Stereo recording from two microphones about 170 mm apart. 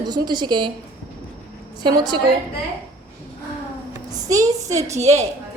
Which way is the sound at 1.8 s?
25° right (ahead or behind).